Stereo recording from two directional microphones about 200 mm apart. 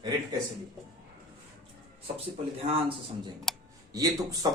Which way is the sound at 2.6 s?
25° right (ahead or behind).